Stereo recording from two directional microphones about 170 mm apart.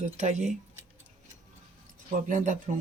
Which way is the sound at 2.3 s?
50° right (ahead or behind).